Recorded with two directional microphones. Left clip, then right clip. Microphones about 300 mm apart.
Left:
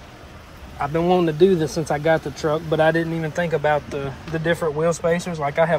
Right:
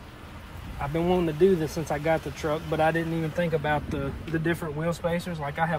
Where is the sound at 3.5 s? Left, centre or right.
Centre.